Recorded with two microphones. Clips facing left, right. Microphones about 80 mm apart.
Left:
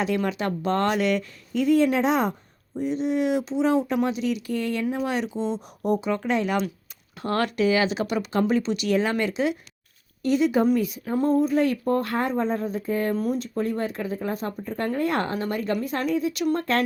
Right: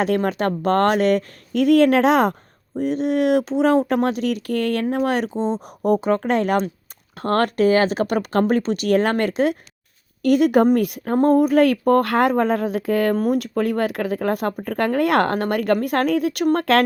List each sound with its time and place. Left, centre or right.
0.2 s speech: right
1.5 s speech: right
2.7 s speech: right
10.2 s speech: right
13.1 s speech: right